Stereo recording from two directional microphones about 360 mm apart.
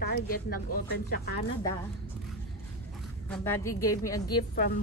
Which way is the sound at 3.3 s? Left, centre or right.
Centre.